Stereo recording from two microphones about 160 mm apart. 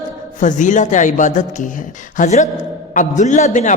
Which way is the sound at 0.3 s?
50° left (ahead or behind).